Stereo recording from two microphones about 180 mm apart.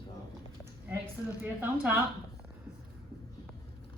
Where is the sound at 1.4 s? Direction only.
10° right (ahead or behind).